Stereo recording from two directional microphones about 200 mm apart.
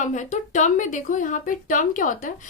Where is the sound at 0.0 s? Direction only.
40° left (ahead or behind).